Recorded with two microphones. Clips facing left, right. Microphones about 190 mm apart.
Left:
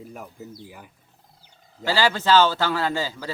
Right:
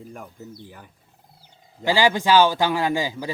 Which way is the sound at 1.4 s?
15° right (ahead or behind).